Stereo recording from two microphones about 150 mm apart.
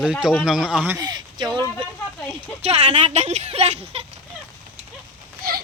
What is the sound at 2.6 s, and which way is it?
Speech, 45° right (ahead or behind).